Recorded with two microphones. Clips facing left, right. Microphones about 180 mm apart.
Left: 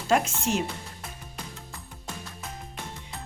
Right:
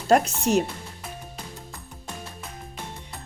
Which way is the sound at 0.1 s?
40° right (ahead or behind).